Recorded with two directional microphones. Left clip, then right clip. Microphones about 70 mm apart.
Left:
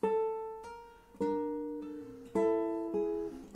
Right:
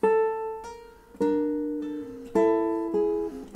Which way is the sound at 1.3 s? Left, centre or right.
Left.